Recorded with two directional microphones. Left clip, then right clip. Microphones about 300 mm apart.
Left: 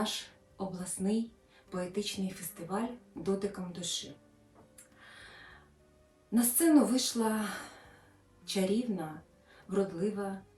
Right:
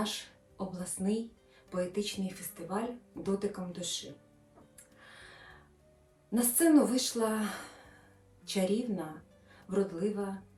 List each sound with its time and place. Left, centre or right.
0.0 s a sound: centre
1.7 s speech: centre
4.9 s music: centre
6.3 s a woman's voice: centre